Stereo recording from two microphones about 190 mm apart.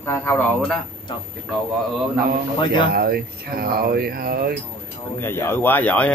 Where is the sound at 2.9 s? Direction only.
55° right (ahead or behind).